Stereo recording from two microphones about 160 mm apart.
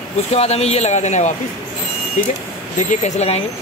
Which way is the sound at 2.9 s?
45° left (ahead or behind).